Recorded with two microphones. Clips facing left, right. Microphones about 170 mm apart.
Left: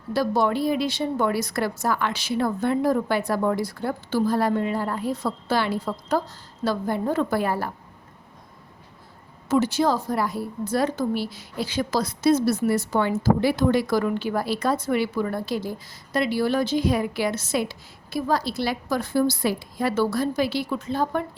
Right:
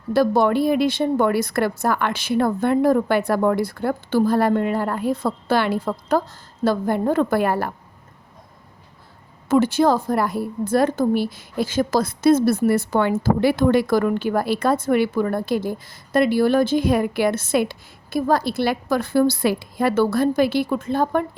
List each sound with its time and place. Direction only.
0.1 s a woman's voice: 55° right (ahead or behind)
9.5 s a woman's voice: 55° right (ahead or behind)